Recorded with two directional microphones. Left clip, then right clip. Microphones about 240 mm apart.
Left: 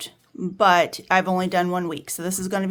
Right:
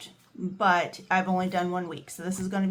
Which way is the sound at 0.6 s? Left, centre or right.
Left.